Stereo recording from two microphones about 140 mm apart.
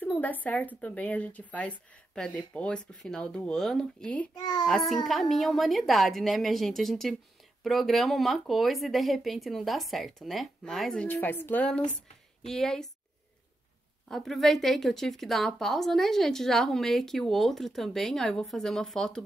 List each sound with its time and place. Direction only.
0.0 s speech: 10° left (ahead or behind)
4.4 s a child's voice: 30° left (ahead or behind)
4.6 s speech: centre (ahead or behind)
11.1 s speech: 15° left (ahead or behind)
14.0 s speech: centre (ahead or behind)